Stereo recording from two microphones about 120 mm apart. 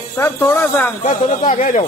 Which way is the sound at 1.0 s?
90° left.